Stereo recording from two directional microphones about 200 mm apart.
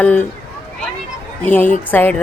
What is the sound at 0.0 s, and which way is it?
Speech, 5° left (ahead or behind).